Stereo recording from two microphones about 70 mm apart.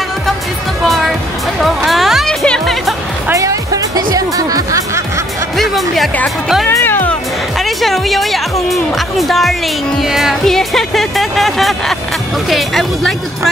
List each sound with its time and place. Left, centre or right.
0.8 s music: centre
2.2 s music: centre
3.3 s music: right
5.6 s music: centre
6.8 s music: left
7.5 s music: centre
12.4 s a woman's voice: centre